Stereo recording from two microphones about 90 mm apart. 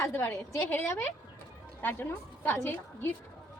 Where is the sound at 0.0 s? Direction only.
25° left (ahead or behind).